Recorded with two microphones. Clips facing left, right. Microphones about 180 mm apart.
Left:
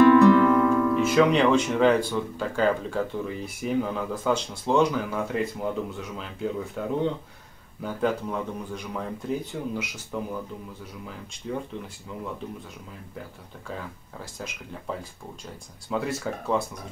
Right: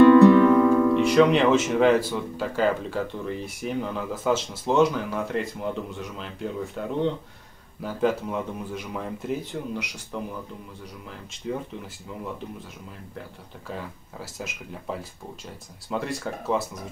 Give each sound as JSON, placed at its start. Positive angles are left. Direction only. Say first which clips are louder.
{"t": 0.1, "sound": "music", "louder": "right 3 dB", "side_deg": -20}
{"t": 1.0, "sound": "speech", "louder": "left 1 dB", "side_deg": 0}
{"t": 14.2, "sound": "speech", "louder": "right 2 dB", "side_deg": -5}